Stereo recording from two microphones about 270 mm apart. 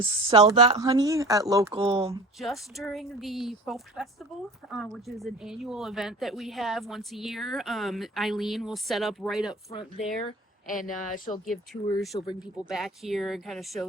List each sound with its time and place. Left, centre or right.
0.0 s speech: centre
2.4 s speech: centre
10.7 s speech: left
11.4 s speech: centre